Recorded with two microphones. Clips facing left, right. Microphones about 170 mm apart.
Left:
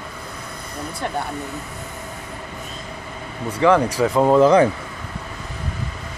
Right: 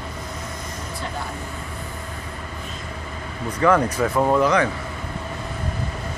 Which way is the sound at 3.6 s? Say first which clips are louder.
Left 2 dB; 10° left (ahead or behind).